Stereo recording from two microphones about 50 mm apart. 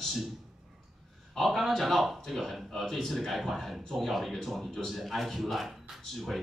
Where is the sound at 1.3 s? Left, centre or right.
Centre.